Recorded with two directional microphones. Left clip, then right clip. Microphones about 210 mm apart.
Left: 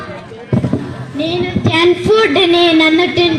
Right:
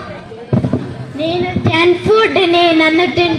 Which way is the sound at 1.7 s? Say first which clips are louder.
Even; 50° left (ahead or behind).